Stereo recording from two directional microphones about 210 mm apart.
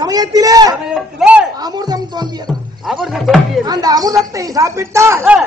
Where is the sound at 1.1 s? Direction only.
5° right (ahead or behind).